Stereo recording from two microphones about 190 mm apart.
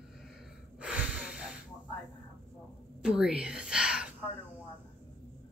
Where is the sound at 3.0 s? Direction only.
5° right (ahead or behind).